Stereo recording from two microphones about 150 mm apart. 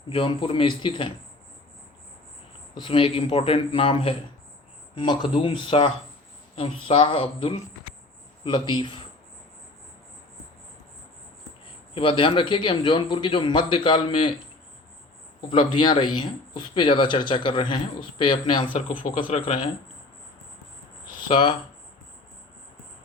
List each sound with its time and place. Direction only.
0.1 s a man's voice: 35° left (ahead or behind)
2.7 s a man's voice: 35° left (ahead or behind)
11.9 s a man's voice: 35° left (ahead or behind)
15.4 s a man's voice: 35° left (ahead or behind)
18.7 s speech: 60° left (ahead or behind)
21.2 s speech: 35° left (ahead or behind)